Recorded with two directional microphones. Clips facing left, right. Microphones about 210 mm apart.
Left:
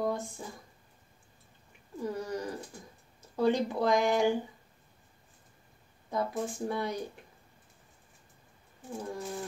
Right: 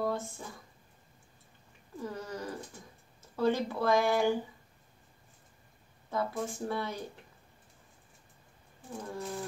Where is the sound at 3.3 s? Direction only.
15° left (ahead or behind).